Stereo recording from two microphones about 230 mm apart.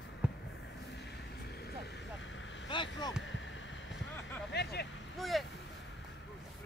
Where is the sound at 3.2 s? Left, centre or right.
Left.